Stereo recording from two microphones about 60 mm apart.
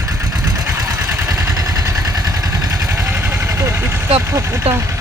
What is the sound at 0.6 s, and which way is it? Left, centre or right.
Vehicle, right.